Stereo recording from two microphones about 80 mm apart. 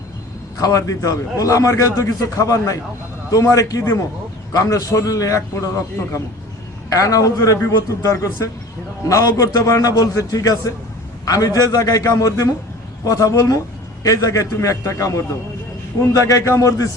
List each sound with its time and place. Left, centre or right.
0.6 s a man's voice: left
16.2 s a man's voice: left